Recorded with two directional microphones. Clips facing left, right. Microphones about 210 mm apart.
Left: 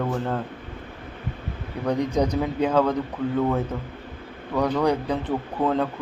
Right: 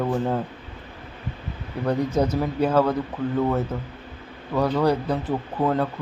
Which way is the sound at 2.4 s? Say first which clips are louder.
Right 1 dB; 15° left (ahead or behind).